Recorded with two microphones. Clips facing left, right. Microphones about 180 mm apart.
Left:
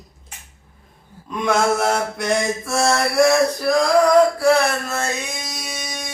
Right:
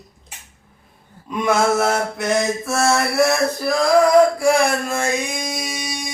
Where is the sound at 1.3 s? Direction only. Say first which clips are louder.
Right 1 dB; 5° right (ahead or behind).